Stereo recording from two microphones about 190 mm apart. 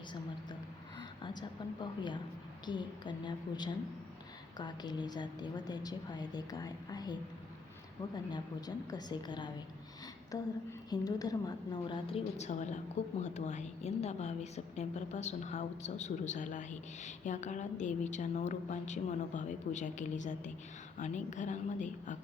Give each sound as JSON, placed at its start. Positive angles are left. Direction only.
{"t": 1.2, "sound": "a woman's voice", "side_deg": 25}